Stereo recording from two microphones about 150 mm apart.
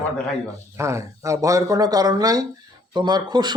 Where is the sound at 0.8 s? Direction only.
20° right (ahead or behind).